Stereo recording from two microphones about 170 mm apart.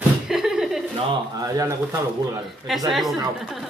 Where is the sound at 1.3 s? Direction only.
20° right (ahead or behind).